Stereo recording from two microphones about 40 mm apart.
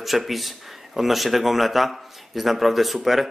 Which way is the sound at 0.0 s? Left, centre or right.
Centre.